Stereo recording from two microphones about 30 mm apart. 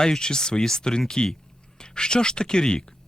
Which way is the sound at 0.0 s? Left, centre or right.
Left.